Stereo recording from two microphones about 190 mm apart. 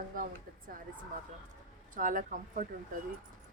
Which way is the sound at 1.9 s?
45° right (ahead or behind).